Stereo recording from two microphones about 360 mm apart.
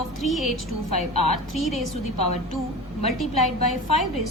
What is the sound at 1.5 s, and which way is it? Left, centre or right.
Speech, centre.